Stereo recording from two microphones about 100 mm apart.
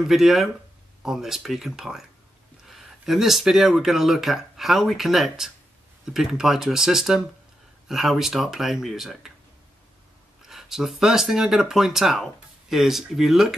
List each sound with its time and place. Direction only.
0.1 s speech: 5° right (ahead or behind)
10.4 s speech: 5° right (ahead or behind)